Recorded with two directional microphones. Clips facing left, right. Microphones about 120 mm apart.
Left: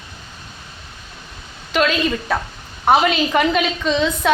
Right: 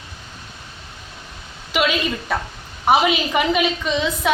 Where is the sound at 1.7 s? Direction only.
10° right (ahead or behind).